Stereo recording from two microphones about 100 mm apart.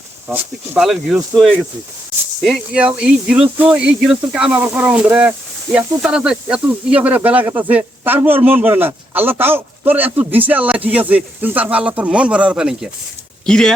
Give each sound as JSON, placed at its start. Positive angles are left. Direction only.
{"t": 0.3, "sound": "speech", "side_deg": -20}
{"t": 0.8, "sound": "speech", "side_deg": -5}
{"t": 3.0, "sound": "a man's voice", "side_deg": -10}
{"t": 13.4, "sound": "speech", "side_deg": 5}